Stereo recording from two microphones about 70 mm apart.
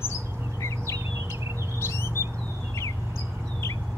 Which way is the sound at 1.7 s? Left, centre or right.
Left.